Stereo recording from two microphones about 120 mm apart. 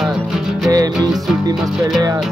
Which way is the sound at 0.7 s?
30° right (ahead or behind).